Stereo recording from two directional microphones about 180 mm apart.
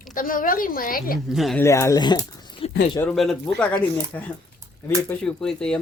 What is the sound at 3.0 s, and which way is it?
Speech, 5° left (ahead or behind).